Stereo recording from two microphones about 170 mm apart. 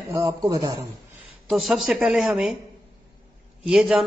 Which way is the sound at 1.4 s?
Centre (ahead or behind).